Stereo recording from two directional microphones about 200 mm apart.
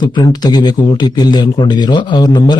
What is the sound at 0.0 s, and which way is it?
A man's voice, 20° left (ahead or behind).